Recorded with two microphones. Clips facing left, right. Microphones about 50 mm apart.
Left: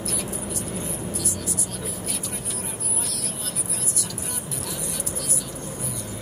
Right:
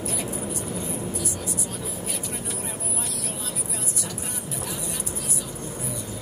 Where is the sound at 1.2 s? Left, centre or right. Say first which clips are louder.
Even; left.